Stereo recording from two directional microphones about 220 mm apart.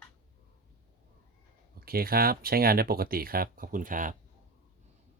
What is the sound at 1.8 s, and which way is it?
Speech, 45° right (ahead or behind).